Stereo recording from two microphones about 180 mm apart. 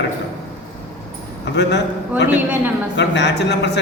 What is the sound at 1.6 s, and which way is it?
Speech, 70° left (ahead or behind).